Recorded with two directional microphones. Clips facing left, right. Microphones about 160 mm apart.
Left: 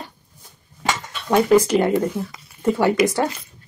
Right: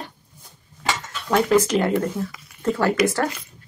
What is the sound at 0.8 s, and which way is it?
Speech, 15° left (ahead or behind).